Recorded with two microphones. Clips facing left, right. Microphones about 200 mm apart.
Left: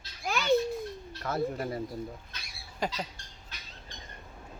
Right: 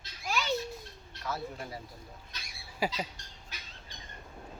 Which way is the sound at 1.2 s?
55° left (ahead or behind).